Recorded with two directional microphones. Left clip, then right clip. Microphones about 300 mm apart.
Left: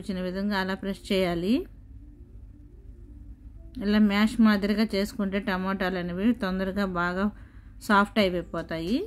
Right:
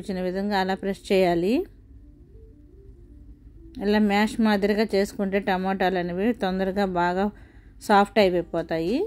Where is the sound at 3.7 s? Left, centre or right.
Centre.